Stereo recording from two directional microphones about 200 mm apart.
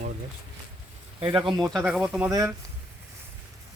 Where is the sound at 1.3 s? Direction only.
25° right (ahead or behind).